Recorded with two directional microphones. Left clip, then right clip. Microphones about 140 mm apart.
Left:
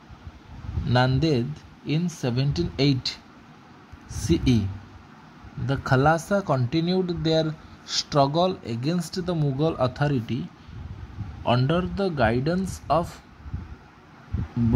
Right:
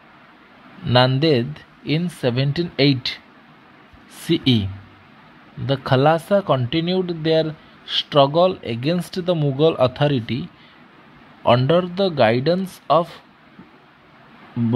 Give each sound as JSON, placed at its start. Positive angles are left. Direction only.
{"t": 0.8, "sound": "speech", "side_deg": -15}
{"t": 4.3, "sound": "speech", "side_deg": -15}
{"t": 5.7, "sound": "speech", "side_deg": -10}
{"t": 8.6, "sound": "speech", "side_deg": -20}
{"t": 11.4, "sound": "speech", "side_deg": -20}